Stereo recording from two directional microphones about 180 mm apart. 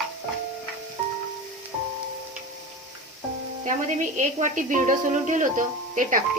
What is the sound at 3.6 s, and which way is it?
A woman's voice, 45° right (ahead or behind).